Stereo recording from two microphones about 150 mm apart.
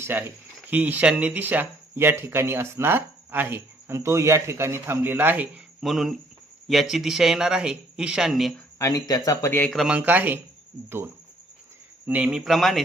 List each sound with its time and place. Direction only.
0.0 s speech: 15° right (ahead or behind)
5.8 s speech: centre (ahead or behind)
8.8 s speech: 25° left (ahead or behind)
9.7 s speech: 5° right (ahead or behind)